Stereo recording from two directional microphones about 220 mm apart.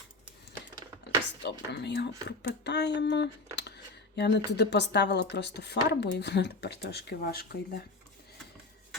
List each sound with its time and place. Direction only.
1.4 s speech: 50° left (ahead or behind)